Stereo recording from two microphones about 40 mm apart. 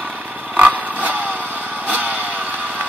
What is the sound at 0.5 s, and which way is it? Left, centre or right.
Vehicle, right.